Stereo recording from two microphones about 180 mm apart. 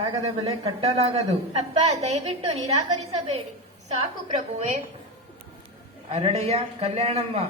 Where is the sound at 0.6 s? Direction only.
35° right (ahead or behind).